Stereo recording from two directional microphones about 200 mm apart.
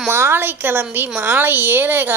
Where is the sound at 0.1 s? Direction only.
10° right (ahead or behind).